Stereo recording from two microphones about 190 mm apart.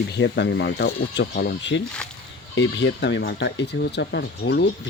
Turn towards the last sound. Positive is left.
turn(degrees=60)  # may be behind; listen again after turning